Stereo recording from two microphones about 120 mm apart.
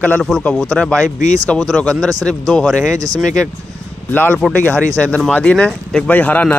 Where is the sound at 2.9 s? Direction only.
30° right (ahead or behind).